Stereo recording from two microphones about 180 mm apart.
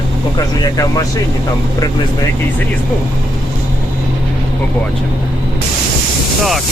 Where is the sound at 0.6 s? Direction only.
20° left (ahead or behind).